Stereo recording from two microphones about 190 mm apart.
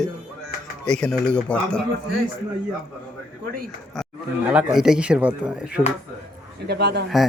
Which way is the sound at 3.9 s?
5° right (ahead or behind).